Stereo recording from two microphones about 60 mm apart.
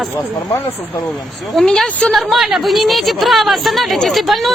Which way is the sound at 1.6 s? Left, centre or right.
Centre.